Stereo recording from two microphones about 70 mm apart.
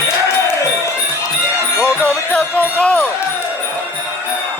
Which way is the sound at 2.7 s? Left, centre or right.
Centre.